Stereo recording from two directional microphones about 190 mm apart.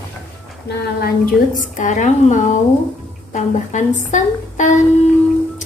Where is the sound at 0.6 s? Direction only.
50° left (ahead or behind).